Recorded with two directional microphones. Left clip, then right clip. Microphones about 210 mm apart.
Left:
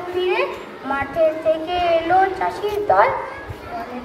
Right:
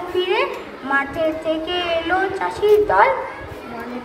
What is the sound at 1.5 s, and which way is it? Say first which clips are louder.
A woman's voice: left 3 dB; 25° right (ahead or behind).